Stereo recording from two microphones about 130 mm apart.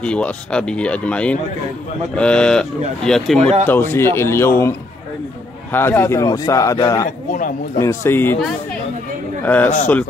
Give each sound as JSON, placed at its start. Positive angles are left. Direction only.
{"t": 0.0, "sound": "speech", "side_deg": 10}
{"t": 3.3, "sound": "speech", "side_deg": -55}
{"t": 3.6, "sound": "a man's voice", "side_deg": 15}
{"t": 9.4, "sound": "speech", "side_deg": 15}